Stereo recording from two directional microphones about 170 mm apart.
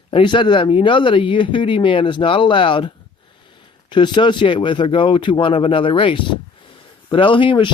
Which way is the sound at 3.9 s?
25° left (ahead or behind).